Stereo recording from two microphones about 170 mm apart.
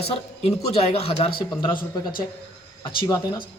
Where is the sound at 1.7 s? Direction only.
55° left (ahead or behind).